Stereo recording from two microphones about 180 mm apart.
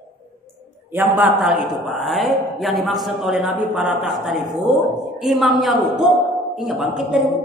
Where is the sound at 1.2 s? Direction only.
5° right (ahead or behind).